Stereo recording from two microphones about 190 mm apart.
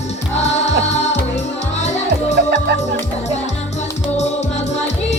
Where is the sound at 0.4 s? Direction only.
35° left (ahead or behind).